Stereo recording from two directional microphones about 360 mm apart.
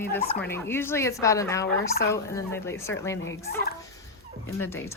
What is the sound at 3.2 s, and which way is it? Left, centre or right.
Turkey, left.